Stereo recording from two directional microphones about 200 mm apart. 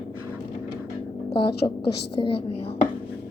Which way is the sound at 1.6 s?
25° left (ahead or behind).